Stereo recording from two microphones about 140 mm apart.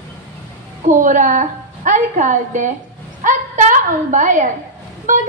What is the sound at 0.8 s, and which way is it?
A woman's voice, 65° right (ahead or behind).